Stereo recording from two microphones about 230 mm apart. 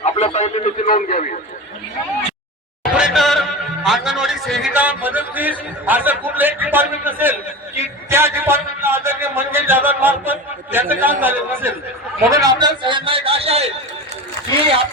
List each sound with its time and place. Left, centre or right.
0.0 s a sound: left
2.8 s music: centre
3.8 s a man's voice: centre; by 13.7 s right